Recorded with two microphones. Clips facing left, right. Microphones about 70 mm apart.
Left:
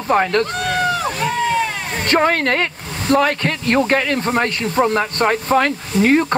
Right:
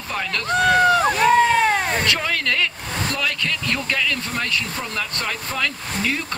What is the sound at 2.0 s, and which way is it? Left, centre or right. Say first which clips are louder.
Speech: left 7 dB; left.